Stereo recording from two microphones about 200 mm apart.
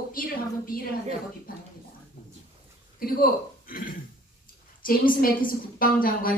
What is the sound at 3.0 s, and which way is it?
A woman's voice, 45° left (ahead or behind).